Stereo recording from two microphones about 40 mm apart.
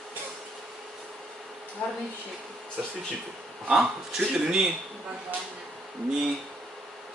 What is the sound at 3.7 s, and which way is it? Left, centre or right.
Speech, centre.